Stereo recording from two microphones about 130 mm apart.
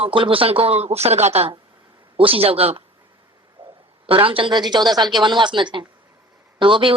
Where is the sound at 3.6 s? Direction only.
40° right (ahead or behind).